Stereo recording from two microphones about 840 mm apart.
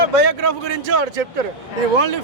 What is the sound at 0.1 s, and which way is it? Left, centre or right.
Speech, right.